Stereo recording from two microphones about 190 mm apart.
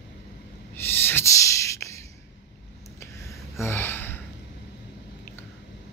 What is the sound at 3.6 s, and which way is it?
Gasp, 10° left (ahead or behind).